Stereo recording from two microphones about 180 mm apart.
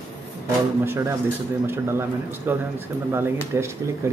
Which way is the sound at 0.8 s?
15° right (ahead or behind).